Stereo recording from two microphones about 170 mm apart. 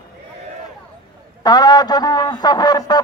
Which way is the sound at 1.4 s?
25° left (ahead or behind).